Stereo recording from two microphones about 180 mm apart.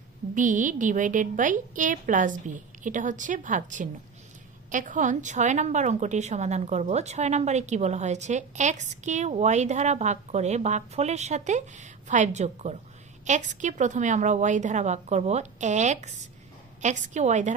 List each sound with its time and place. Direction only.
0.3 s a woman's voice: 45° right (ahead or behind)